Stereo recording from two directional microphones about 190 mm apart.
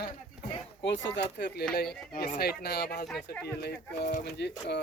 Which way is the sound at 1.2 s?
60° left (ahead or behind).